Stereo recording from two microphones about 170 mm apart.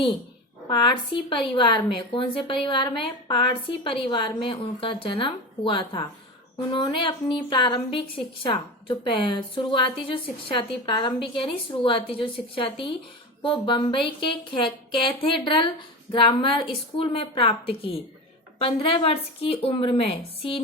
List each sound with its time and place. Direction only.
0.7 s a woman's voice: 30° left (ahead or behind)